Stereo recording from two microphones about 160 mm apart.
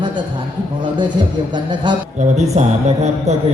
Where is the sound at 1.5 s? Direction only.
30° right (ahead or behind).